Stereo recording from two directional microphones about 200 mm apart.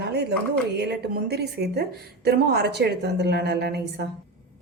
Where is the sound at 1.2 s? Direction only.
55° right (ahead or behind).